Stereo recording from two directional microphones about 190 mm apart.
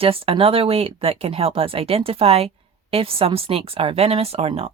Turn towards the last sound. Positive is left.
turn(degrees=-30)  # may be behind; listen again after turning